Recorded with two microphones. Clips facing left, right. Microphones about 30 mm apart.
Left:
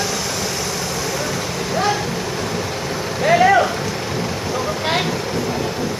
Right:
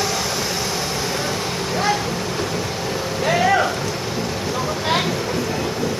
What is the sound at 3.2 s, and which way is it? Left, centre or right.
Vehicle, left.